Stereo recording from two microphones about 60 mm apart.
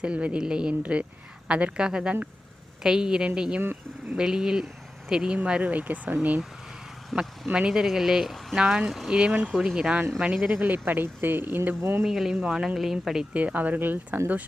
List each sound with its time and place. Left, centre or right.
0.0 s speech: right
7.4 s speech: centre
10.6 s speech: right
12.0 s speech: centre
13.3 s speech: right